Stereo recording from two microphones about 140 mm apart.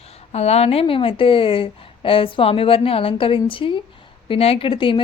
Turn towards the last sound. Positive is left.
turn(degrees=35)  # may be behind; listen again after turning